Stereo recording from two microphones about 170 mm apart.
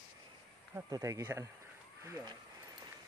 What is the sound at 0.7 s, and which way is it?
Speech, 20° right (ahead or behind).